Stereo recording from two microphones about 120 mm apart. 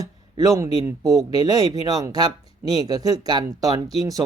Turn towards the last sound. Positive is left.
turn(degrees=-30)  # may be behind; listen again after turning